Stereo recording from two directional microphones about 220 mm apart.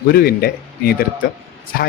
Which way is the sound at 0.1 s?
45° left (ahead or behind).